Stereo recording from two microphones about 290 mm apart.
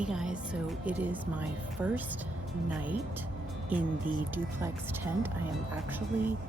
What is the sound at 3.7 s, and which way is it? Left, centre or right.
Speech, centre.